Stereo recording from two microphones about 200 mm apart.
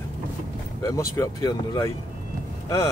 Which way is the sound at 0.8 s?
15° left (ahead or behind).